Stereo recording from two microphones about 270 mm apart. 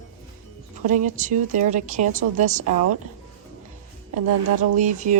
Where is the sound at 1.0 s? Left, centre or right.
Right.